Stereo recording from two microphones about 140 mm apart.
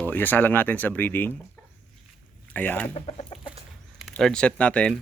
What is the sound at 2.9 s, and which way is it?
Speech, 45° left (ahead or behind).